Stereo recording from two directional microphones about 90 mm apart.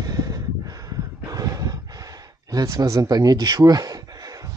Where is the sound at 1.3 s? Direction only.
45° right (ahead or behind).